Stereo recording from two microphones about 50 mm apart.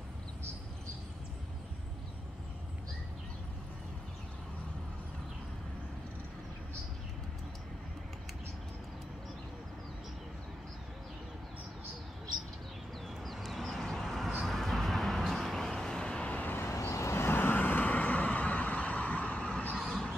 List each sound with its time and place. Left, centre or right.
13.2 s a sound: centre
14.4 s vehicle: centre
16.3 s vehicle: left
16.6 s vehicle: left
17.4 s vehicle: left